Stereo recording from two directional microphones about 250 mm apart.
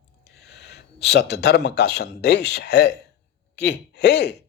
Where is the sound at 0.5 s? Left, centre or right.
Left.